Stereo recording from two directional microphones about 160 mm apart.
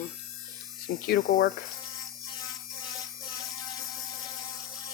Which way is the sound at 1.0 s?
70° left (ahead or behind).